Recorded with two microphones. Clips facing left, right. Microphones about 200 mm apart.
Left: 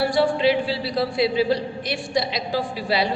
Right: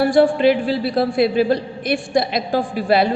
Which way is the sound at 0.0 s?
50° right (ahead or behind).